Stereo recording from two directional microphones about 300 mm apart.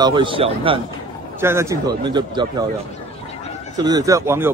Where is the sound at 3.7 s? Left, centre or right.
Centre.